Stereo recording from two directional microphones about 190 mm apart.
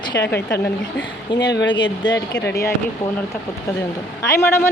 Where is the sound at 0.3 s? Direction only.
10° left (ahead or behind).